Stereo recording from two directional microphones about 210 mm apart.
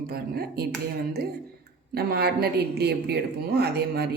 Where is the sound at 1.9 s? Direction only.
50° right (ahead or behind).